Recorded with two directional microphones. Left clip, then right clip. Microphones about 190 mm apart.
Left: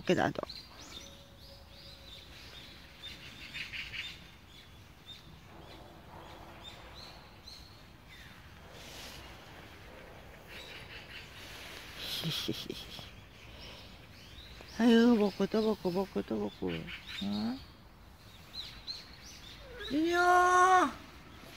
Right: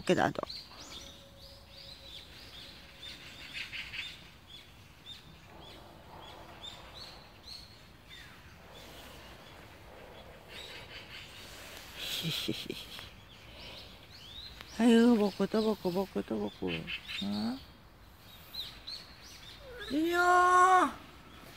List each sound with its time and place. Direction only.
0.0 s speech: 10° right (ahead or behind)
3.5 s squeal: 25° right (ahead or behind)
12.0 s a sound: 15° right (ahead or behind)
14.8 s speech: 15° right (ahead or behind)
15.8 s speech: centre (ahead or behind)
16.6 s speech: 30° right (ahead or behind)
17.3 s speech: 15° right (ahead or behind)
20.0 s speech: 5° right (ahead or behind)